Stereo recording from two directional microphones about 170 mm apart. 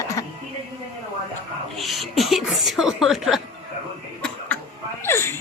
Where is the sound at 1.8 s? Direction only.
Centre (ahead or behind).